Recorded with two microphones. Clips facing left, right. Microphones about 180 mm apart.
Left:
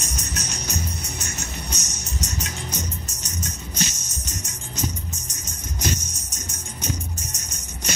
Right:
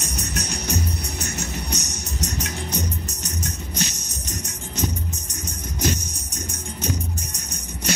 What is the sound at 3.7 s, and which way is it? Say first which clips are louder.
Music: even; 65° right (ahead or behind).